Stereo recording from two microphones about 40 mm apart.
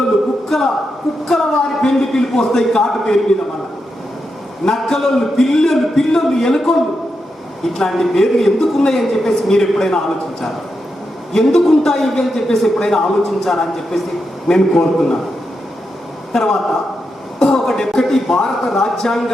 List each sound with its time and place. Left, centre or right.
0.4 s a sound: centre
1.3 s a man's voice: centre
4.6 s a man's voice: centre
11.3 s a man's voice: centre
16.3 s a man's voice: centre